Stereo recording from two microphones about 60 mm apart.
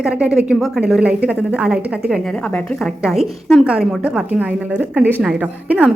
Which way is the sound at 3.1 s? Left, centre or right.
Centre.